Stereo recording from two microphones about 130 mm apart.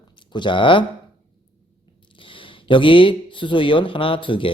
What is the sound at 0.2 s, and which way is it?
Speech, 40° left (ahead or behind).